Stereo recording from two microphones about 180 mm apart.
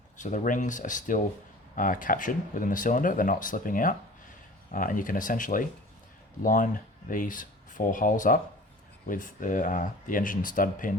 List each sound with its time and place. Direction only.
0.2 s speech: 45° left (ahead or behind)